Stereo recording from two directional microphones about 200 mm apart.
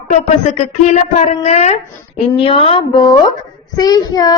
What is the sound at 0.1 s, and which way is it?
A woman's voice, 35° left (ahead or behind).